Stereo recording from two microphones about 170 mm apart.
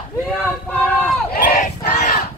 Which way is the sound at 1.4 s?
55° left (ahead or behind).